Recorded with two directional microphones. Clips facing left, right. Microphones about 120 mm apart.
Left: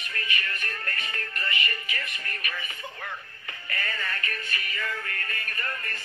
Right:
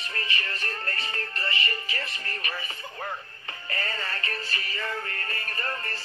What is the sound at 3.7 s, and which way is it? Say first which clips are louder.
Synthetic singing: even; 30° right (ahead or behind).